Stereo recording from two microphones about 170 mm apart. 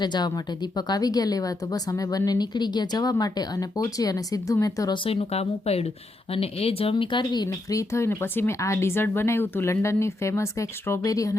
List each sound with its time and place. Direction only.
0.0 s a woman's voice: 25° left (ahead or behind)
5.0 s speech: 35° left (ahead or behind); by 11.3 s 20° left (ahead or behind)